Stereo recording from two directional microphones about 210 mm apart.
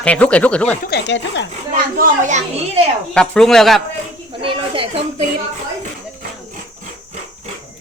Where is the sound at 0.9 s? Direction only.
55° left (ahead or behind).